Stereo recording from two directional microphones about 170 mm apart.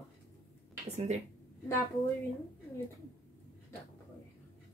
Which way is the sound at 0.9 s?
40° right (ahead or behind).